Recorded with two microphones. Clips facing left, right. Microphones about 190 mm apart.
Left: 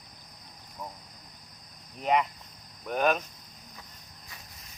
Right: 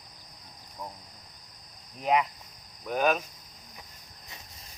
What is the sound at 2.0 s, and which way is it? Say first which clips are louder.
Speech: even; centre (ahead or behind).